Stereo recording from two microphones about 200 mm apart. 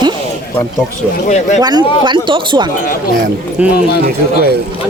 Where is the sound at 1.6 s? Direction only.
20° right (ahead or behind).